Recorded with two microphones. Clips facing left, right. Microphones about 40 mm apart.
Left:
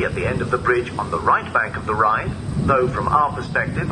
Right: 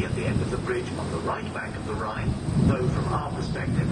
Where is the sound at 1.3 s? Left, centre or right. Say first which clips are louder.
Left 13 dB; left.